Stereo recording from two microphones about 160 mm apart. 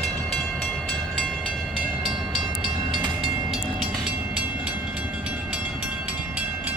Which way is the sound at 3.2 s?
Centre (ahead or behind).